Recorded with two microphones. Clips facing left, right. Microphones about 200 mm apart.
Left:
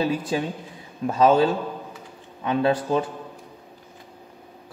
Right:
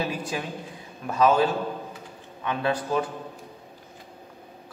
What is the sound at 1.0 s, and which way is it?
Speech, 30° left (ahead or behind).